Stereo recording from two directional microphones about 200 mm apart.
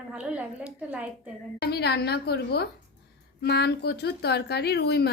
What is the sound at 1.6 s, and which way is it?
A woman's voice, 55° left (ahead or behind).